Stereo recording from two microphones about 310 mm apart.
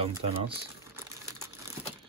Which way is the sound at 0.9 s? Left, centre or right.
Centre.